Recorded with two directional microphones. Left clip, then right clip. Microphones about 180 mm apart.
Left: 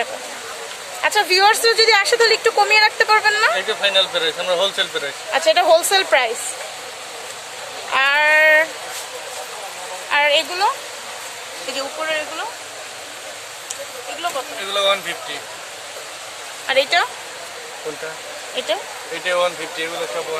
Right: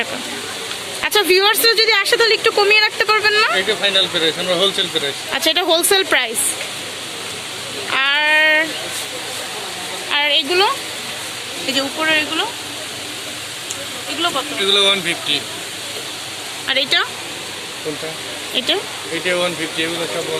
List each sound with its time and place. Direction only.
1.0 s speech: centre (ahead or behind)
3.7 s speech: 55° left (ahead or behind)
5.3 s speech: centre (ahead or behind)
7.9 s a sound: 5° left (ahead or behind)
10.1 s speech: 5° left (ahead or behind)
12.0 s speech: centre (ahead or behind)
14.7 s speech: 40° left (ahead or behind)
16.6 s speech: 10° left (ahead or behind)
19.2 s speech: 50° left (ahead or behind)